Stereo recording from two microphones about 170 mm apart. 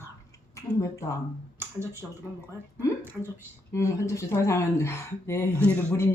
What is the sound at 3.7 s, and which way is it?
Speech, 20° left (ahead or behind).